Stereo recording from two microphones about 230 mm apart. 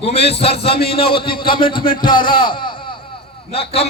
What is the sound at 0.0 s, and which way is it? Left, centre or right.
A man's voice, left.